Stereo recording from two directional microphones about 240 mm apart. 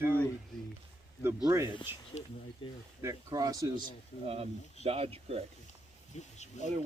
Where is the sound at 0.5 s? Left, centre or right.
Centre.